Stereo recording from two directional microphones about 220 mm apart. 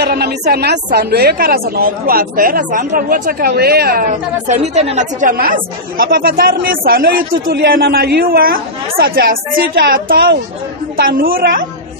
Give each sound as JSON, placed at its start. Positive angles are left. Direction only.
{"t": 0.0, "sound": "a woman's voice", "side_deg": -45}